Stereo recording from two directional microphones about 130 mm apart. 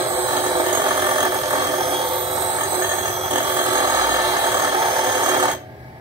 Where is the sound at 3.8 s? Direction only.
25° right (ahead or behind).